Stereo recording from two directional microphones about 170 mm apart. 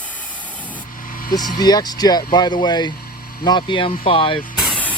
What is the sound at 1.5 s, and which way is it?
Speech, 25° left (ahead or behind).